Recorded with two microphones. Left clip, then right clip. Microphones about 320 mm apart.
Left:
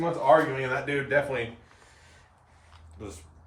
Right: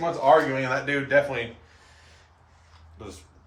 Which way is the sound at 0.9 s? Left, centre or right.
Centre.